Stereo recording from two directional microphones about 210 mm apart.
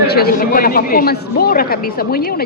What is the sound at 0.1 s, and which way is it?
Speech, 45° left (ahead or behind).